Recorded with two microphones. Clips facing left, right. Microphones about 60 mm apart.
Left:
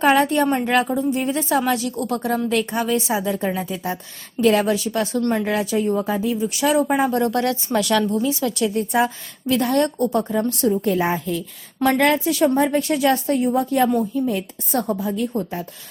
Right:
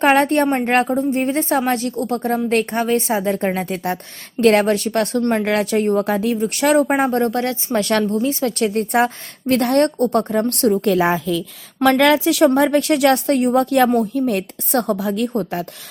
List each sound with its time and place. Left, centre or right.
0.0 s a woman's voice: right
2.5 s a woman's voice: right
15.3 s a woman's voice: right